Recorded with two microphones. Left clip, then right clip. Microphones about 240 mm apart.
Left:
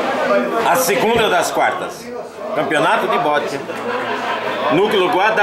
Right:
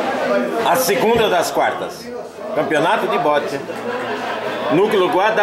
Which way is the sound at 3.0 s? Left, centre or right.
Centre.